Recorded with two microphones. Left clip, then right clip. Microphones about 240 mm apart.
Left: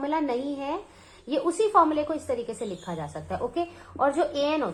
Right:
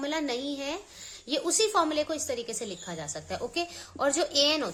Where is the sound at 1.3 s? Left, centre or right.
Right.